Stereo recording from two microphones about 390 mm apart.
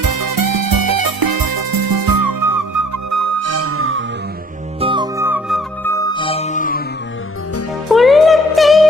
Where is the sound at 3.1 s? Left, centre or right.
Right.